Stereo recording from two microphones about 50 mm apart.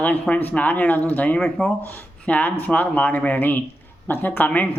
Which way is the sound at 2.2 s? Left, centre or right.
Left.